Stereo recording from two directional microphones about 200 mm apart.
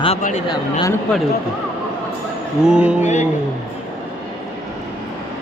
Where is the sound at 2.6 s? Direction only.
5° right (ahead or behind).